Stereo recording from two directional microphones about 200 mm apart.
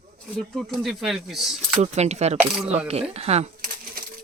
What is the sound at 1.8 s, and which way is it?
Speech, 35° right (ahead or behind).